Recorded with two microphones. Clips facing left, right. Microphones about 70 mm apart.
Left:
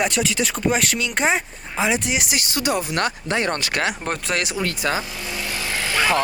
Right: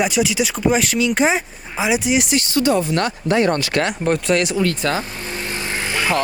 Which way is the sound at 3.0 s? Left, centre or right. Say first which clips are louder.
Right 5 dB; left.